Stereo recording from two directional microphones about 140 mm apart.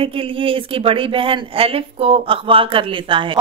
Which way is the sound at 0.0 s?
40° right (ahead or behind).